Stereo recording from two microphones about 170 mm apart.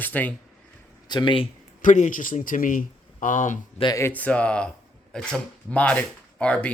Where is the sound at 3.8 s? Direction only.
25° left (ahead or behind).